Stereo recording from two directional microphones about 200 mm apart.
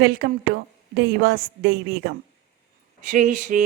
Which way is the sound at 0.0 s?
50° right (ahead or behind).